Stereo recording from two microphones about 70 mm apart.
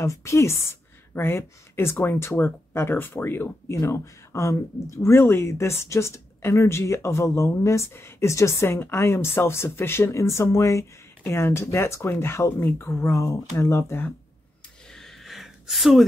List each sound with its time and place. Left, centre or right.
0.0 s speech: left
3.7 s speech: left
14.9 s a sound: centre